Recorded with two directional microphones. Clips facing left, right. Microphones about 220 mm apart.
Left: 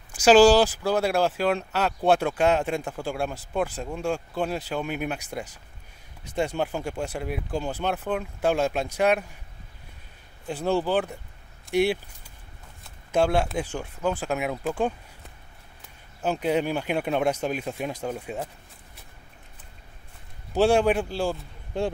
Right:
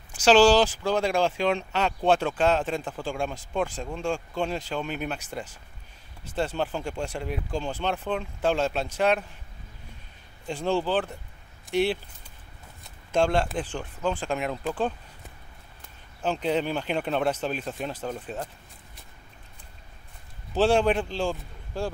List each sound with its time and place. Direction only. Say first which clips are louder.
0.1 s speech: left 2 dB; 10° left (ahead or behind)
10.4 s speech: left 1 dB; 5° left (ahead or behind)
13.1 s speech: left 1 dB; 10° left (ahead or behind)
16.2 s speech: left 2 dB; 10° left (ahead or behind)
20.5 s speech: left 1 dB; 10° left (ahead or behind)
21.7 s speech: left 4 dB; 20° left (ahead or behind)